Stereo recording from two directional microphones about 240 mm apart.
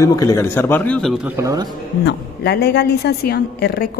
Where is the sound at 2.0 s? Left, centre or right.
Left.